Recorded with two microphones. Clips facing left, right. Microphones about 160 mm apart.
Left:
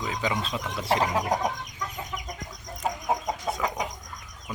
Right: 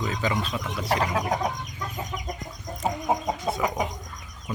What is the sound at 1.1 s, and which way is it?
Chicken, 15° left (ahead or behind).